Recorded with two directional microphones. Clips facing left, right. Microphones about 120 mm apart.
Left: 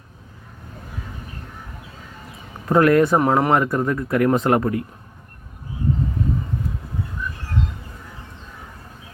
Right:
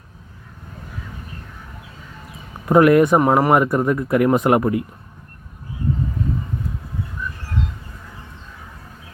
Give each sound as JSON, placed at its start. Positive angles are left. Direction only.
{"t": 2.6, "sound": "speech", "side_deg": -15}
{"t": 3.2, "sound": "speech", "side_deg": -5}